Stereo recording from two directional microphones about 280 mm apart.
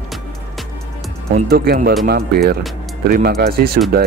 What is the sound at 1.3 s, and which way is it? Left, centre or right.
Speech, right.